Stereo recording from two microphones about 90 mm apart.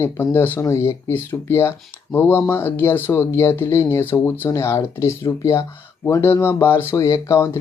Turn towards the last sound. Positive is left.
turn(degrees=35)  # may be behind; listen again after turning